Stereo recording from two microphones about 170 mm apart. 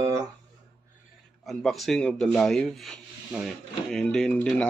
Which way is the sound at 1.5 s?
Centre (ahead or behind).